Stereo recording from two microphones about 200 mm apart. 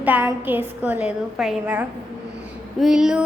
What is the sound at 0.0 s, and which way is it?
A woman's voice, 10° right (ahead or behind).